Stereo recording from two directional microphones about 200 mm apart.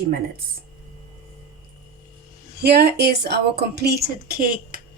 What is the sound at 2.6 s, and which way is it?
A woman's voice, 55° right (ahead or behind).